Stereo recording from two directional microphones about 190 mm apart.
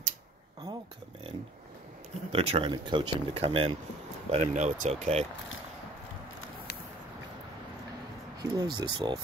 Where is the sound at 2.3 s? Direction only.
30° right (ahead or behind).